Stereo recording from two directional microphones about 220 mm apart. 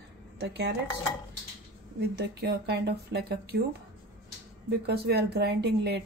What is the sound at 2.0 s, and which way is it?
Speech, 45° right (ahead or behind).